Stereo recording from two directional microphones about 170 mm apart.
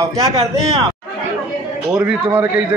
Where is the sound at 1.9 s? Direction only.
5° right (ahead or behind).